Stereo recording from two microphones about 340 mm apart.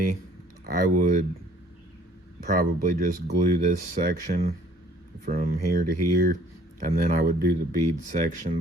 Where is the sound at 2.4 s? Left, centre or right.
Right.